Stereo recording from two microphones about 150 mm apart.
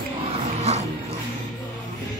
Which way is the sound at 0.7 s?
45° right (ahead or behind).